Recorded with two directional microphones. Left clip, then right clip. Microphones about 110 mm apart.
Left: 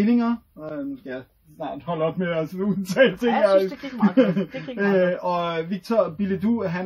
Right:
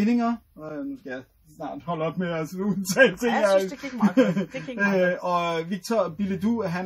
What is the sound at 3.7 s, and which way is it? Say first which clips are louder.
Speech: left 2 dB; 15° left (ahead or behind).